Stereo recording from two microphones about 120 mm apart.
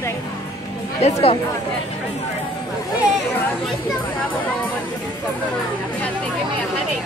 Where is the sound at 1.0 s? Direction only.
60° left (ahead or behind).